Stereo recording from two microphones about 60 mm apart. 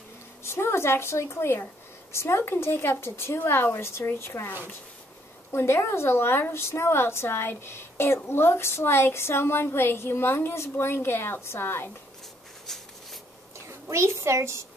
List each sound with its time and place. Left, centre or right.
0.4 s a woman's voice: left
12.6 s writing: centre
13.7 s a woman's voice: right